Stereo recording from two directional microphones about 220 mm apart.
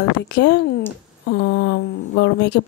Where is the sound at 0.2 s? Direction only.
50° left (ahead or behind).